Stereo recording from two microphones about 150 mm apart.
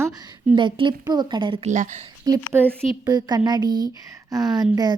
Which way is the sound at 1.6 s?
55° right (ahead or behind).